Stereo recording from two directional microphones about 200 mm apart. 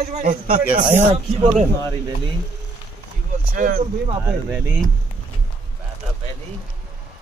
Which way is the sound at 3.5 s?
40° right (ahead or behind).